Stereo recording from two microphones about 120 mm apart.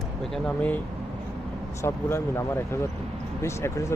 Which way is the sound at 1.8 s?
20° left (ahead or behind).